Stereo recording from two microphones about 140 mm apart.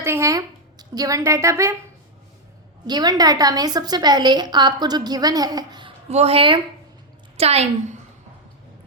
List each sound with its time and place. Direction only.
0.0 s a sound: 20° right (ahead or behind)
2.8 s a woman's voice: 30° right (ahead or behind)
6.1 s a woman's voice: 45° right (ahead or behind)